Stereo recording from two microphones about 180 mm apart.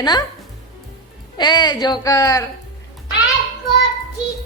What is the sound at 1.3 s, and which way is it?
A woman's voice, 25° left (ahead or behind).